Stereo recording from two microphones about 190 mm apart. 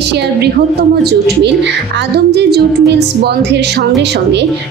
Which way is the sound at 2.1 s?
60° right (ahead or behind).